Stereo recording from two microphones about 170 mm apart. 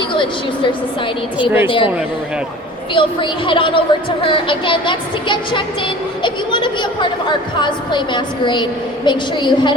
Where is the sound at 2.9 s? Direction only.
30° left (ahead or behind).